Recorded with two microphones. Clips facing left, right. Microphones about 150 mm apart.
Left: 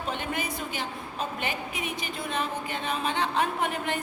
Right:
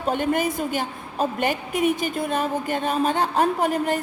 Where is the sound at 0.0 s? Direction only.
45° right (ahead or behind).